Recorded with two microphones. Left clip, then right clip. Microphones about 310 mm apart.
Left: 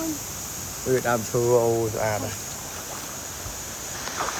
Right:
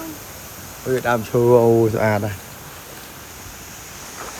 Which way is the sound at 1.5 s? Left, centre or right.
Right.